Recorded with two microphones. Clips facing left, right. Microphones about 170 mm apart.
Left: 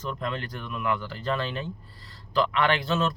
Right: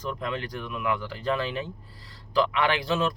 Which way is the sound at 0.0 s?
10° right (ahead or behind).